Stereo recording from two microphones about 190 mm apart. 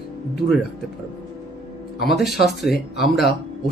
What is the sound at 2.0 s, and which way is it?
Speech, centre (ahead or behind).